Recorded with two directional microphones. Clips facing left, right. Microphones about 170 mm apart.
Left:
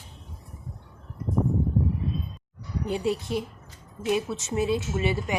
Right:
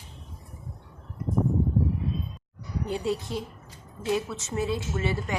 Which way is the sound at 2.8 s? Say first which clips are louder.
Left 2 dB; 15° left (ahead or behind).